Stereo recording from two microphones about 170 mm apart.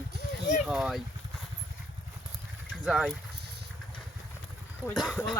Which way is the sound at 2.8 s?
Centre (ahead or behind).